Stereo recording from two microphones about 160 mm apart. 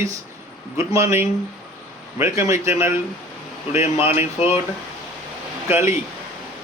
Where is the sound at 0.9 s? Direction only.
15° right (ahead or behind).